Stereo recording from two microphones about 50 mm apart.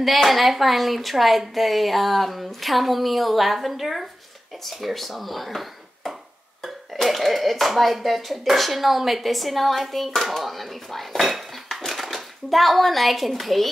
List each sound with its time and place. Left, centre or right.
0.0 s speech: centre